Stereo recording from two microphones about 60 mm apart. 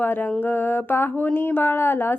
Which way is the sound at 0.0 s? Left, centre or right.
Left.